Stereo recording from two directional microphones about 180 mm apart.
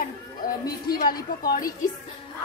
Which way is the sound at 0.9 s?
55° left (ahead or behind).